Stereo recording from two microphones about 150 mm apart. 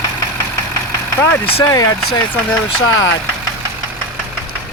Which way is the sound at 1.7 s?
25° left (ahead or behind).